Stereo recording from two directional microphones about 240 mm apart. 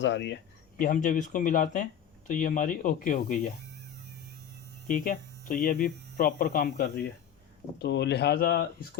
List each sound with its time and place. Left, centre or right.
0.0 s speech: left
0.8 s speech: left
4.9 s hum: left
7.8 s speech: left